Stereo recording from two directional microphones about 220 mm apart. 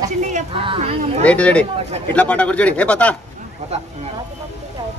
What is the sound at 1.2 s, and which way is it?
Speech, 5° left (ahead or behind).